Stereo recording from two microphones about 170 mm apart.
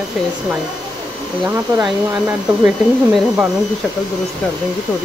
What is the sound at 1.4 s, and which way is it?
Speech, 20° right (ahead or behind).